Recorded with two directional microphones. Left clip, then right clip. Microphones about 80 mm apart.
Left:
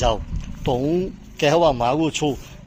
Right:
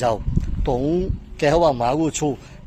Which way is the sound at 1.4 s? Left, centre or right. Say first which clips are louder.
Even; right.